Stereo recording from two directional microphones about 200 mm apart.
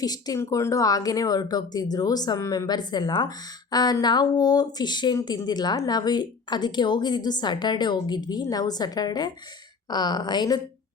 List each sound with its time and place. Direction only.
0.0 s speech: 20° left (ahead or behind)